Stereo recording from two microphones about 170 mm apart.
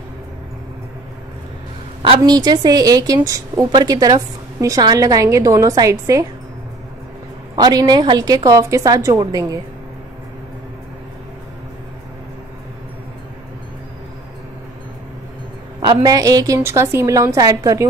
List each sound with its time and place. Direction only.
2.0 s a woman's voice: 25° right (ahead or behind)
7.5 s a woman's voice: 25° right (ahead or behind)
15.8 s a woman's voice: 25° right (ahead or behind)